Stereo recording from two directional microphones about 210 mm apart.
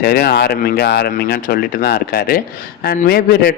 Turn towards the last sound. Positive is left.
turn(degrees=45)  # may be behind; listen again after turning